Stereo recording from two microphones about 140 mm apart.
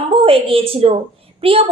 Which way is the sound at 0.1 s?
40° right (ahead or behind).